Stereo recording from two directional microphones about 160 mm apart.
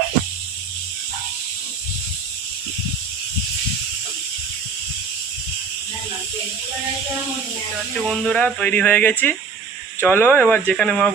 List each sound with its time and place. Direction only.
8.0 s speech: 5° left (ahead or behind)